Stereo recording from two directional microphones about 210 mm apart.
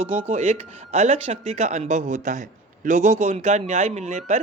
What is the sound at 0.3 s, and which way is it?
Speech, 30° right (ahead or behind).